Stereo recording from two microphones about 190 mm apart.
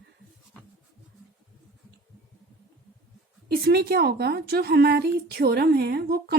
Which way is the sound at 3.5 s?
55° right (ahead or behind).